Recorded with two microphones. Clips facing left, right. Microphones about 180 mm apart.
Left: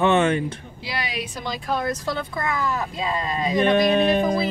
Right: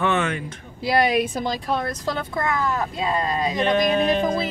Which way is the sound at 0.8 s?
50° right (ahead or behind).